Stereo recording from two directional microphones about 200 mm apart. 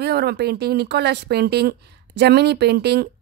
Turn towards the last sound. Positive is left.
turn(degrees=-55)  # may be behind; listen again after turning